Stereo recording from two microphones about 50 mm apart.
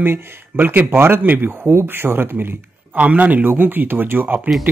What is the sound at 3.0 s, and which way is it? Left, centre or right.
Speech, right.